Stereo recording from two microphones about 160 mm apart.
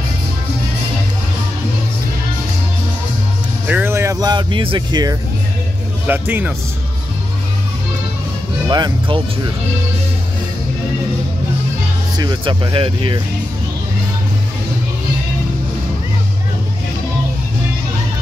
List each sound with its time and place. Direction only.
3.6 s speech: 10° right (ahead or behind); by 5.1 s 25° right (ahead or behind)
6.0 s speech: 10° right (ahead or behind)
8.6 s speech: 30° right (ahead or behind)
12.2 s speech: 30° right (ahead or behind)